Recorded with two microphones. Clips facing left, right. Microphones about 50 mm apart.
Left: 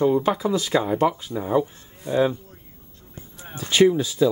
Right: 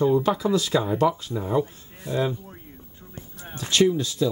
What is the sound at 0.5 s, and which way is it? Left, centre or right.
Speech, left.